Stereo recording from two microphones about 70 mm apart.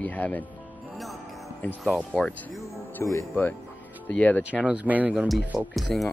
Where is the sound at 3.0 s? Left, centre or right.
Left.